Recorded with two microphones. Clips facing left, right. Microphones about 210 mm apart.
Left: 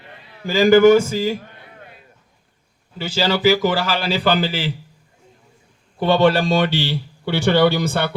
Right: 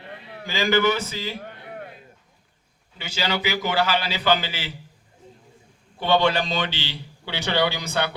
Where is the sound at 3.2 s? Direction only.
50° left (ahead or behind).